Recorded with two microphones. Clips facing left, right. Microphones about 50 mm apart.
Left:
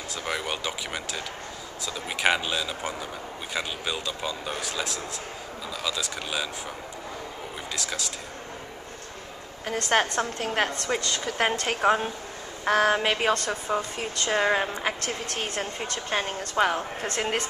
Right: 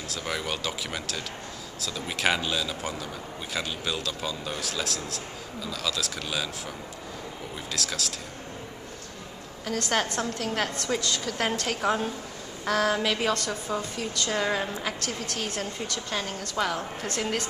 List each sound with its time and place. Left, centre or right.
0.1 s speech: centre
7.7 s speech: centre
9.7 s a woman's voice: left